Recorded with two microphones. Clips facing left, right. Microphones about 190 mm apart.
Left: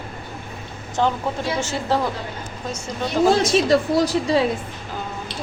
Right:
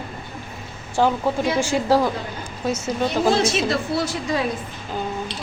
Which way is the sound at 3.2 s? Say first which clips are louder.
Left 4 dB; 10° right (ahead or behind).